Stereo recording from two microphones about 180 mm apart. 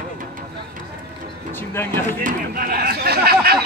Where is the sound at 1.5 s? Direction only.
10° left (ahead or behind).